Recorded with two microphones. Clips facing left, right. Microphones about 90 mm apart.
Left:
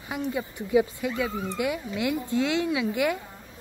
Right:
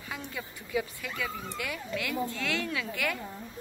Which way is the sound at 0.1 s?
20° left (ahead or behind).